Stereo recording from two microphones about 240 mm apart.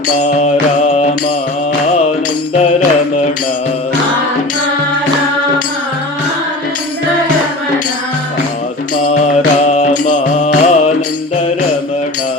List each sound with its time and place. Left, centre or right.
0.2 s mantra: left
9.1 s music: left